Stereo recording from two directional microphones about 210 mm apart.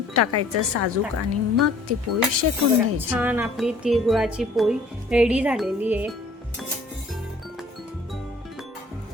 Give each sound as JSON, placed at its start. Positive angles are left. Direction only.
{"t": 0.1, "sound": "speech", "side_deg": -90}
{"t": 3.1, "sound": "a woman's voice", "side_deg": -10}